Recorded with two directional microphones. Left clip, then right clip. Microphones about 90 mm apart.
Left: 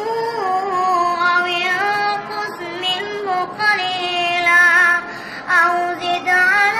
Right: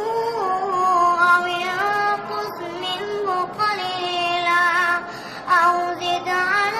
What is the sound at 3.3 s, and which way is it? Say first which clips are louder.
Female singing: left 5 dB; 35° right (ahead or behind).